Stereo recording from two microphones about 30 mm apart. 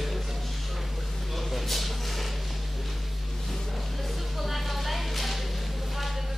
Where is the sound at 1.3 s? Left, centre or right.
Centre.